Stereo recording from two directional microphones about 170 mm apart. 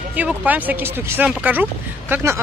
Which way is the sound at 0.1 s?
10° right (ahead or behind).